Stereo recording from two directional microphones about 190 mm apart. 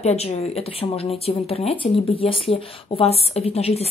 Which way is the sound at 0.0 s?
35° left (ahead or behind).